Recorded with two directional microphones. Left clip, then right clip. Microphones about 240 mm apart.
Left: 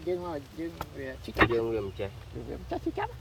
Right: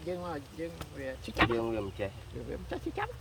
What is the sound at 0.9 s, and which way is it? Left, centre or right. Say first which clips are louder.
Speech: left 4 dB; centre.